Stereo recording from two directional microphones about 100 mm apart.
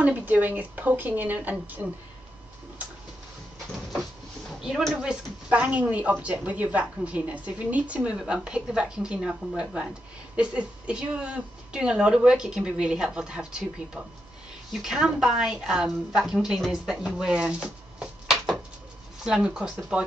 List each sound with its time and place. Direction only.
0.0 s speech: 15° right (ahead or behind)
4.6 s speech: 5° right (ahead or behind)